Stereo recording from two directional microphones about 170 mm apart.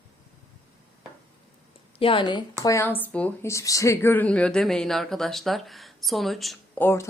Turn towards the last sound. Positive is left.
turn(degrees=15)  # may be behind; listen again after turning